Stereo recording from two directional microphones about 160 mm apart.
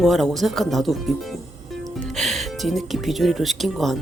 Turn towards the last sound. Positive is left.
turn(degrees=0)  # may be behind; listen again after turning